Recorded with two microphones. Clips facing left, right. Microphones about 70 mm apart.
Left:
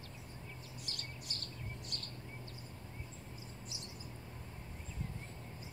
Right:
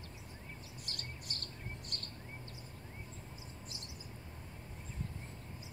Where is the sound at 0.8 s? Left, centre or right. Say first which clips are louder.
Right 1 dB; right.